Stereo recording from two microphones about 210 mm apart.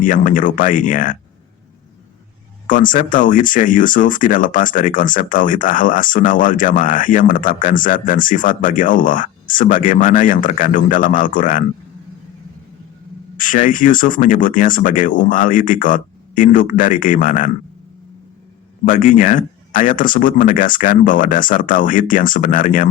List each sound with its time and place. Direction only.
0.0 s speech: 40° left (ahead or behind)
2.6 s speech: 40° left (ahead or behind)
13.3 s speech: 40° left (ahead or behind)
18.9 s speech: 40° left (ahead or behind)